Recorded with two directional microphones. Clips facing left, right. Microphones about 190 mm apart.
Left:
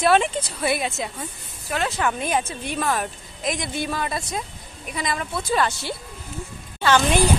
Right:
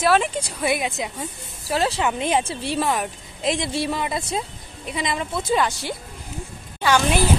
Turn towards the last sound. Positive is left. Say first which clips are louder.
# even
turn(degrees=-10)  # may be behind; listen again after turning